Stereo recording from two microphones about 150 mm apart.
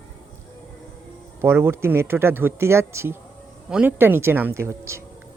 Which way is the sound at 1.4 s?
15° right (ahead or behind).